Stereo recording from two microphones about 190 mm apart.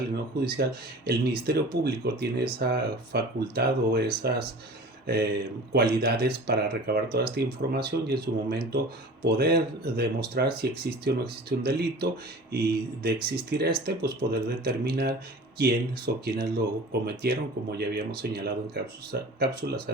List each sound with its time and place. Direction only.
0.3 s speech: 55° right (ahead or behind)